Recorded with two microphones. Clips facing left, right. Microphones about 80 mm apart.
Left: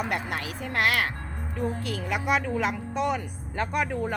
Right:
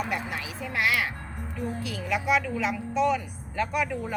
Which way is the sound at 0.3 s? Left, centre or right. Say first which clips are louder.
Left 2 dB; left.